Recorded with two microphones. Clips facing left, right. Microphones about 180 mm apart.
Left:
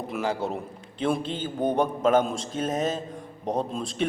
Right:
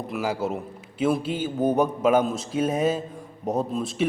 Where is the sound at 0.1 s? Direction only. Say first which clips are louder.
Right 1 dB; 5° right (ahead or behind).